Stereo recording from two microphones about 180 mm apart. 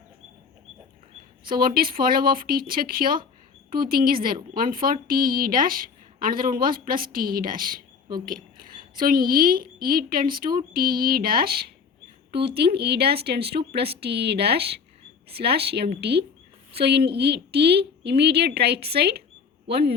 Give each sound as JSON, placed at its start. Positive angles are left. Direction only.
{"t": 1.5, "sound": "a woman's voice", "side_deg": -55}